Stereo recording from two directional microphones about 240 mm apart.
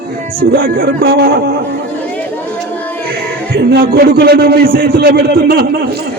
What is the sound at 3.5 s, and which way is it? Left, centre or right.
A man's voice, right.